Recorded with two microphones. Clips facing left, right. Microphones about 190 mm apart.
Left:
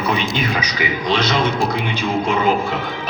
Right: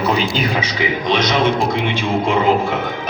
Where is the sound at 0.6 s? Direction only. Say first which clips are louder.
Right 2 dB; 20° right (ahead or behind).